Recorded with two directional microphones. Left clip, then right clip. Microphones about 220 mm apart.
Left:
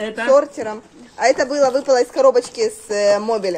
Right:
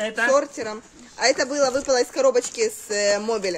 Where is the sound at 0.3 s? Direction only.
10° right (ahead or behind).